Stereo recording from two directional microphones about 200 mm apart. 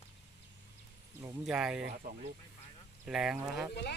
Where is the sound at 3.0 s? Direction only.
5° right (ahead or behind).